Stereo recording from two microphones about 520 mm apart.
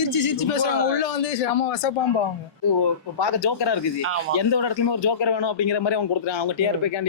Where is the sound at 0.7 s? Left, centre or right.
Left.